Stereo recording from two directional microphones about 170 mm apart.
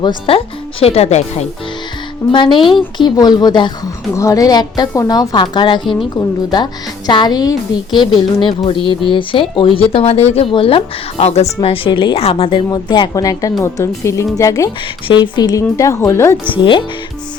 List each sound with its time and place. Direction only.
0.0 s speech: 30° left (ahead or behind)
2.2 s speech: 15° left (ahead or behind)
5.8 s a woman's voice: centre (ahead or behind)
6.1 s speech: 25° left (ahead or behind)
16.5 s speech: 30° left (ahead or behind)